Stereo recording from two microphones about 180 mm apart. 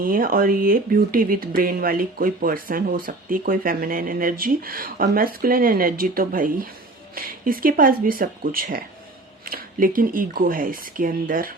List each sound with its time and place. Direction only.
0.0 s speech: 50° right (ahead or behind)